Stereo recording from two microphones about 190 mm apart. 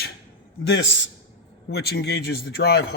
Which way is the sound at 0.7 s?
75° left (ahead or behind).